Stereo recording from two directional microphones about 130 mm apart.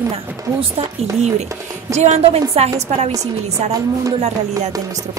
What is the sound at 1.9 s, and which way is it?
A woman's voice, 60° right (ahead or behind).